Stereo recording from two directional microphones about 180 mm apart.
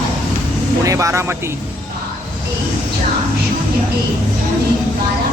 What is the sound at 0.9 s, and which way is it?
Speech, 15° right (ahead or behind).